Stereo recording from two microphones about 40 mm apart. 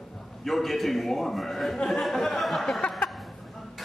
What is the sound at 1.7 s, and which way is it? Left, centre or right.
A man's voice, centre.